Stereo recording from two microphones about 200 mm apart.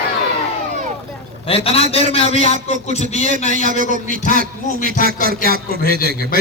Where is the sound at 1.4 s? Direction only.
30° left (ahead or behind).